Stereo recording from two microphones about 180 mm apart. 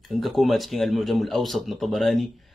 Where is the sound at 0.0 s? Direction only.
Centre (ahead or behind).